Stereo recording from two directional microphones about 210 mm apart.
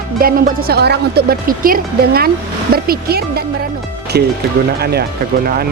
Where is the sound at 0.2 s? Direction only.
45° right (ahead or behind).